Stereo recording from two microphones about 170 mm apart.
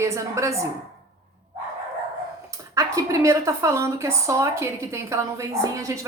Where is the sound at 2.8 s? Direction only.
20° right (ahead or behind).